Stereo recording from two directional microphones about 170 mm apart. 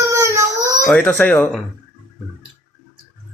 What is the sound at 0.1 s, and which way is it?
Baby cry, 15° right (ahead or behind).